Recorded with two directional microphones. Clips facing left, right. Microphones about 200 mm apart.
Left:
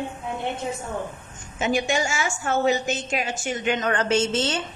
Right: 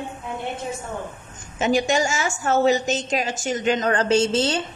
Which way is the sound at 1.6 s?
40° right (ahead or behind).